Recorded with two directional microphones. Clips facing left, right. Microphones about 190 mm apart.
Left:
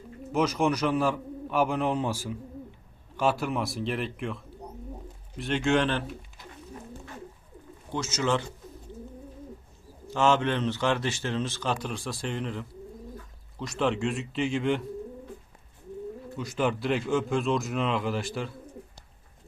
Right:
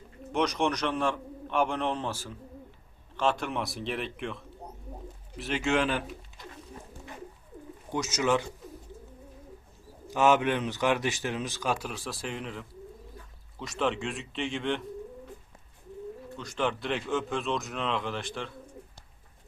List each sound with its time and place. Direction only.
0.3 s a man's voice: 5° left (ahead or behind)
7.9 s a man's voice: 15° right (ahead or behind)
10.1 s a man's voice: 15° right (ahead or behind); by 14.8 s 5° left (ahead or behind)
16.3 s a man's voice: 5° left (ahead or behind)